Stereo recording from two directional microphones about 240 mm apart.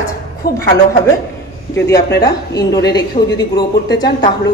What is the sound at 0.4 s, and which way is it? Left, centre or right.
Speech, left.